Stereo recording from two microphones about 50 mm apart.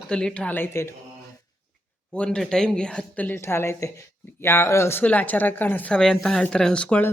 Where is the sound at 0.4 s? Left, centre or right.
Left.